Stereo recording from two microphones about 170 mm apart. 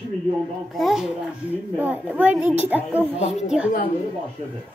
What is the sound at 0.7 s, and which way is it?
A child's voice, centre (ahead or behind).